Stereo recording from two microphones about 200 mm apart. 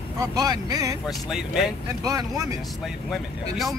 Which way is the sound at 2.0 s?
15° right (ahead or behind).